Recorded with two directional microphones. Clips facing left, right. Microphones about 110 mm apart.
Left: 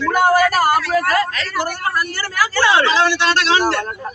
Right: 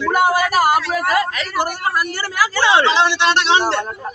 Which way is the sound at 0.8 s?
20° right (ahead or behind).